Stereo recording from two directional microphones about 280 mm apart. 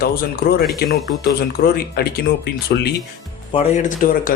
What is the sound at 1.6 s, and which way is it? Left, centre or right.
Speech, left.